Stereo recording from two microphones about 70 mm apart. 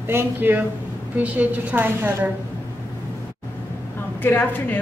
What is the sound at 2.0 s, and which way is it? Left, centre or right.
Speech, right.